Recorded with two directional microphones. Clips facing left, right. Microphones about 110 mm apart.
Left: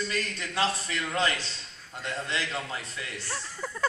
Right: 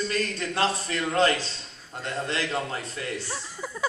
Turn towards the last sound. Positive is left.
turn(degrees=-5)  # may be behind; listen again after turning